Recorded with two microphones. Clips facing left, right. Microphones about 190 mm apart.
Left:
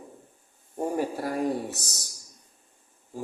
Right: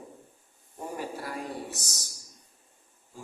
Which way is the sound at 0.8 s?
50° left (ahead or behind).